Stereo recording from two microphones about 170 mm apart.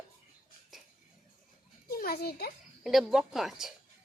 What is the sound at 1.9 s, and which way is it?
Speech, 60° left (ahead or behind).